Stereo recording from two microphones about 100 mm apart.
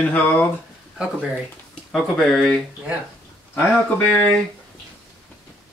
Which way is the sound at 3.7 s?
10° left (ahead or behind).